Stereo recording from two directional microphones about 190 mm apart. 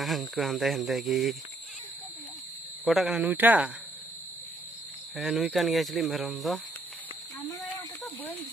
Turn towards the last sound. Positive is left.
turn(degrees=0)  # may be behind; listen again after turning